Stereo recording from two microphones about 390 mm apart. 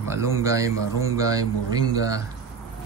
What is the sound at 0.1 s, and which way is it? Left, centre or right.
A man's voice, centre.